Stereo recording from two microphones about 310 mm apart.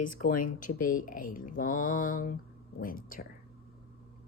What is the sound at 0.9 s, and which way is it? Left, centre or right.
Speech, left.